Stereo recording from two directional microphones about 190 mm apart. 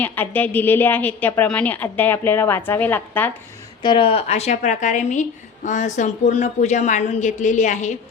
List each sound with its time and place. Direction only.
0.0 s a woman's voice: 10° left (ahead or behind)
3.8 s a woman's voice: 25° left (ahead or behind)